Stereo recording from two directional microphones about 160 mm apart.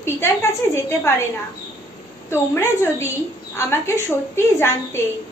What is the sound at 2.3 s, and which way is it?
A woman's voice, 15° left (ahead or behind).